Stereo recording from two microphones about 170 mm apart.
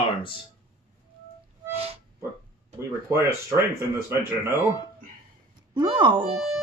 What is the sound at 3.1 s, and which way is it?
Speech, 15° right (ahead or behind).